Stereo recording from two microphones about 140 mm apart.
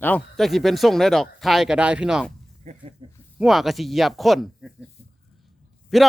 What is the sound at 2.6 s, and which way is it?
Speech, 50° right (ahead or behind).